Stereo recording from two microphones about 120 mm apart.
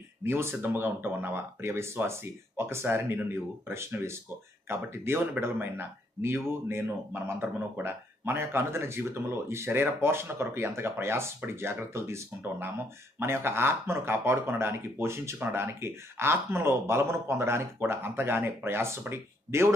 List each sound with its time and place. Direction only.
0.2 s speech: 20° right (ahead or behind)